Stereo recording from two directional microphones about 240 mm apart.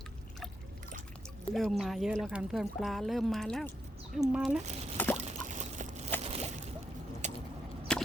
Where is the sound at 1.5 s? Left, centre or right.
Centre.